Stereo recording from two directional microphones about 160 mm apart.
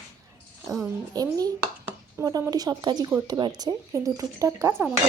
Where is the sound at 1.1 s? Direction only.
25° right (ahead or behind).